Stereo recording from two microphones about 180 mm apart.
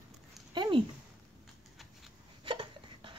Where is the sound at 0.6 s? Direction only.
25° right (ahead or behind).